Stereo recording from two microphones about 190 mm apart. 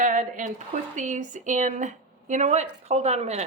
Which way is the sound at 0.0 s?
45° right (ahead or behind).